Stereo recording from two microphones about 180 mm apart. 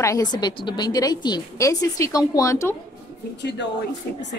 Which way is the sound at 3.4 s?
70° left (ahead or behind).